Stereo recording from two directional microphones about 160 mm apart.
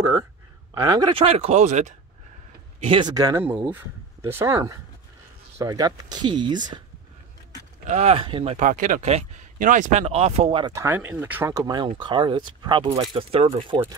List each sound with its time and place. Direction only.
0.8 s speech: 25° right (ahead or behind); by 2.0 s 45° right (ahead or behind)
2.8 s speech: 30° right (ahead or behind)
7.8 s speech: 45° right (ahead or behind)
8.5 s speech: 55° right (ahead or behind)
10.6 s speech: 20° right (ahead or behind); by 13.7 s 35° right (ahead or behind)